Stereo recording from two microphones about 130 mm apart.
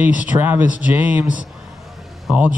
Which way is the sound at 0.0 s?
10° right (ahead or behind).